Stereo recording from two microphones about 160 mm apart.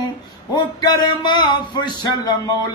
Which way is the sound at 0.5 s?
30° left (ahead or behind).